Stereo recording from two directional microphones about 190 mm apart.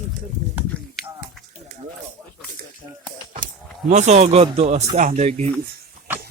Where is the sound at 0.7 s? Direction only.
5° left (ahead or behind).